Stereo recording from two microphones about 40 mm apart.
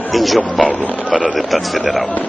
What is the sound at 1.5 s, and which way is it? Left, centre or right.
Speech, centre.